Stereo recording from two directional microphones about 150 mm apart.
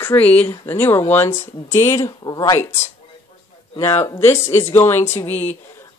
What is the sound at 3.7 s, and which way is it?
Speech, 20° left (ahead or behind).